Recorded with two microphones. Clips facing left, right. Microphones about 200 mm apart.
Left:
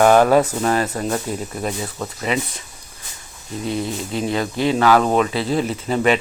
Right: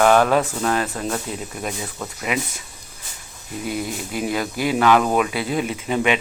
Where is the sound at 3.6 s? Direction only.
25° left (ahead or behind).